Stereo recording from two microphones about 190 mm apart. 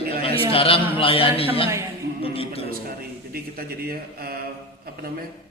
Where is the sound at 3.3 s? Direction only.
50° right (ahead or behind).